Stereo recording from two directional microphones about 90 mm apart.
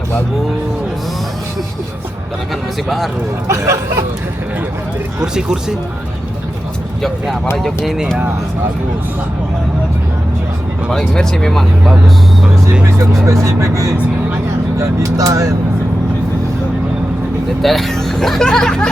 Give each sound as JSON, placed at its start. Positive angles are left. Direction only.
{"t": 3.4, "sound": "speech", "side_deg": -35}
{"t": 5.2, "sound": "speech", "side_deg": -10}
{"t": 11.1, "sound": "speech", "side_deg": 5}
{"t": 13.2, "sound": "speech", "side_deg": -35}
{"t": 17.6, "sound": "speech", "side_deg": 0}